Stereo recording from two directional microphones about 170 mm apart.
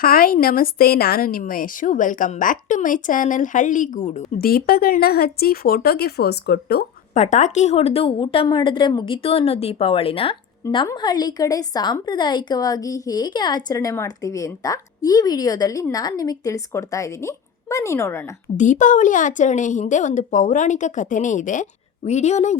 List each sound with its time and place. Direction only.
0.0 s a woman's voice: 60° left (ahead or behind); by 4.3 s 45° left (ahead or behind)
4.4 s speech: 60° left (ahead or behind)
7.1 s a woman's voice: 45° left (ahead or behind); by 18.2 s 15° left (ahead or behind)
18.5 s a woman's voice: 45° left (ahead or behind)